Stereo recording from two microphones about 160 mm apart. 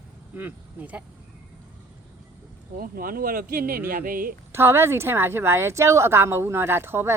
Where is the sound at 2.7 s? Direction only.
65° right (ahead or behind).